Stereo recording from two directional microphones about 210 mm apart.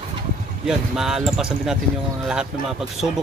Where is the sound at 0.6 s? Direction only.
Centre (ahead or behind).